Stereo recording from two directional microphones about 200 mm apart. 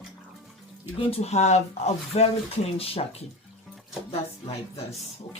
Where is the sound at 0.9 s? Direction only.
30° left (ahead or behind).